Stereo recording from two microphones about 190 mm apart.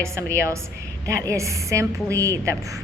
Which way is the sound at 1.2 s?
15° right (ahead or behind).